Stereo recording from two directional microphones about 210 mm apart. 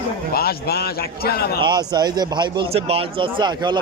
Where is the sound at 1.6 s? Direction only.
20° right (ahead or behind).